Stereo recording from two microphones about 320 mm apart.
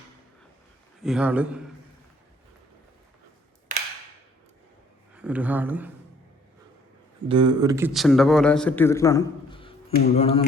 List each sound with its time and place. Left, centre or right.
1.0 s a man's voice: centre
3.7 s a sound: right
5.1 s speech: centre
7.3 s a man's voice: centre